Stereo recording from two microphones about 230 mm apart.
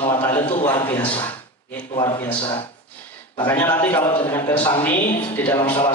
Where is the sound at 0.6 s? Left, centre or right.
Left.